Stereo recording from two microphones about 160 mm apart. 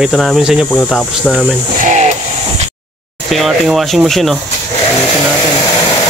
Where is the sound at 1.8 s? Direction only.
50° right (ahead or behind).